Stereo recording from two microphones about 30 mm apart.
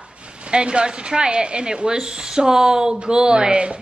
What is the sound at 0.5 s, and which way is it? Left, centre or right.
Speech, right.